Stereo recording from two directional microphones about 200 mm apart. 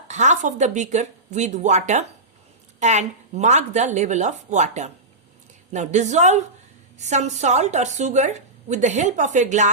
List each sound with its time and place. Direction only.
0.1 s a woman's voice: 35° right (ahead or behind)